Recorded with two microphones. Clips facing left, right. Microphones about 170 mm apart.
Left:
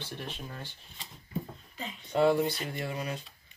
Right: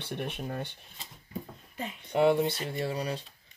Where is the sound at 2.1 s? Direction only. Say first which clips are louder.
Right 1 dB; 20° right (ahead or behind).